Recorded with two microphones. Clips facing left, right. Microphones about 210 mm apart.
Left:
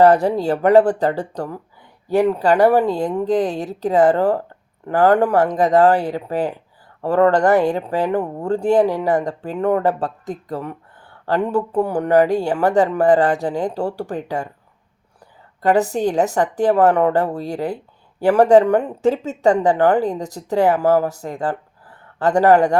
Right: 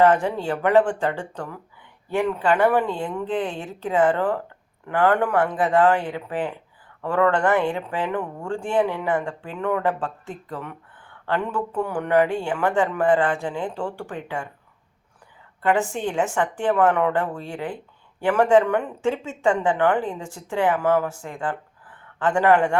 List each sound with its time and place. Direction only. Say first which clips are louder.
0.0 s speech: left 5 dB; 40° left (ahead or behind)
15.6 s speech: left 6 dB; 40° left (ahead or behind)